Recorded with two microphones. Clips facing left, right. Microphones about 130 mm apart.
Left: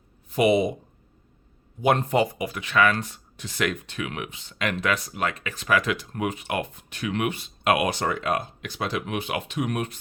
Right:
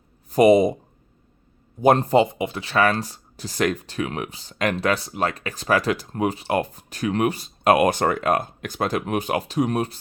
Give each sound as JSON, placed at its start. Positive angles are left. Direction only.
{"t": 0.3, "sound": "speech", "side_deg": -40}
{"t": 1.8, "sound": "speech", "side_deg": -35}
{"t": 2.2, "sound": "speech", "side_deg": -25}